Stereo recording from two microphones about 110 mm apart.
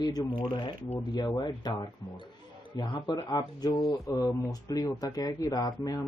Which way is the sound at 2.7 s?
40° left (ahead or behind).